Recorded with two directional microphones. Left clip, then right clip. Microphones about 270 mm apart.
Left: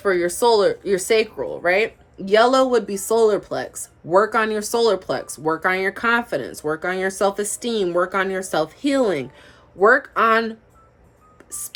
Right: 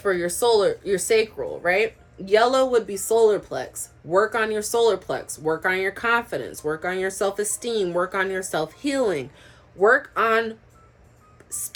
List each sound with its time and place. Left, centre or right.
0.0 s speech: centre